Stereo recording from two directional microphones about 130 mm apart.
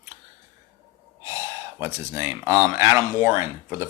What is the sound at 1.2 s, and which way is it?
Speech, 20° right (ahead or behind).